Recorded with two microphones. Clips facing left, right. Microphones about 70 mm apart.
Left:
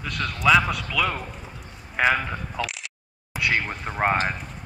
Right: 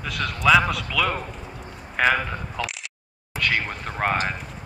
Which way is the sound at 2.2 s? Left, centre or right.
Centre.